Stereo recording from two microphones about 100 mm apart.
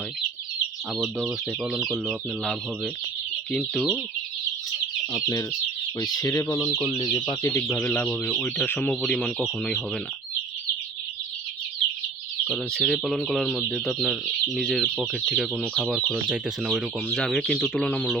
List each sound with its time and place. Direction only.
0.9 s speech: centre (ahead or behind)
3.5 s speech: 5° left (ahead or behind)
5.1 s speech: 35° left (ahead or behind)
6.8 s speech: 50° left (ahead or behind)
7.5 s speech: 25° left (ahead or behind)
7.8 s speech: 15° left (ahead or behind)
8.9 s speech: 5° left (ahead or behind)
12.5 s speech: 5° left (ahead or behind)
16.3 s speech: 10° right (ahead or behind)
17.1 s speech: 5° left (ahead or behind)